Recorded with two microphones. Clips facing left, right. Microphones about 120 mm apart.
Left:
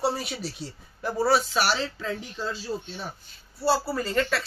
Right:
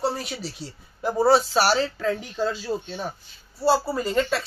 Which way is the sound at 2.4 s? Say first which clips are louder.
Right 6 dB; 60° right (ahead or behind).